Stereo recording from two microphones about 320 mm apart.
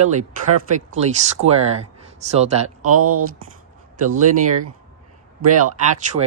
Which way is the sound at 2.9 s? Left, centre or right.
Right.